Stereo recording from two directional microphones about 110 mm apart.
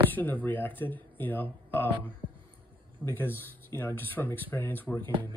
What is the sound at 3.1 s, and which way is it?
Speech, 20° left (ahead or behind).